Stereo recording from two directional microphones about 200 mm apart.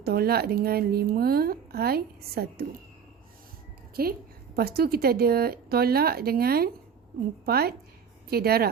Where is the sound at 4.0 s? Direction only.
50° right (ahead or behind).